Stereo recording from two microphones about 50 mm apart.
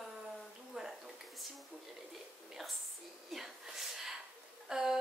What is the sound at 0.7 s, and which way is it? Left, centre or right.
Speech, centre.